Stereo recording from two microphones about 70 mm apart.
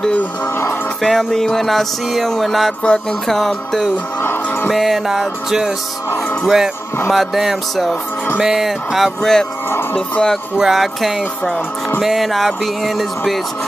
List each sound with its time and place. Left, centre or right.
1.0 s music: centre
2.8 s music: centre
4.2 s music: left
4.6 s music: centre
6.4 s speech: centre
7.1 s music: centre
9.9 s speech: centre
10.6 s music: centre